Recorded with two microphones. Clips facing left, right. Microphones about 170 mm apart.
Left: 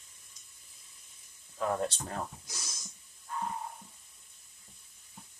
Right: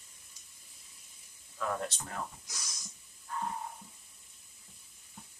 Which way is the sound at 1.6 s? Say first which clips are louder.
Left 4 dB; 25° left (ahead or behind).